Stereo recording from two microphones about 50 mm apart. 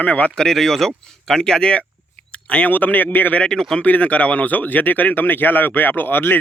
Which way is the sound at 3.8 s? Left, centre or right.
Left.